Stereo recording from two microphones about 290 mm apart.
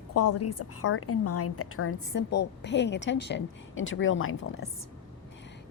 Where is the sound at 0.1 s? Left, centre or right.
Left.